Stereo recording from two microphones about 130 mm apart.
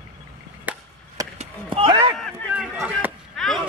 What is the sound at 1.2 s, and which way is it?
Chop, 30° right (ahead or behind).